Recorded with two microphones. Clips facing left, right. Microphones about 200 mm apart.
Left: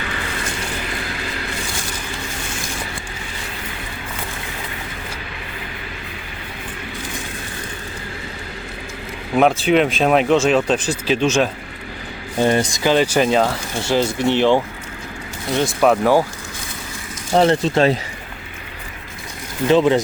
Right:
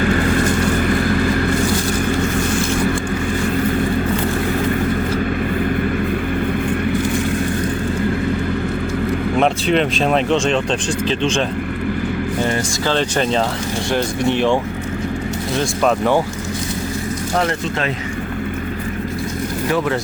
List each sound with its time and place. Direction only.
0.0 s vehicle: 50° right (ahead or behind)
9.4 s speech: 5° left (ahead or behind)
12.5 s speech: 15° left (ahead or behind)
15.8 s speech: 5° left (ahead or behind)
17.3 s speech: 30° left (ahead or behind)
19.6 s speech: 20° left (ahead or behind)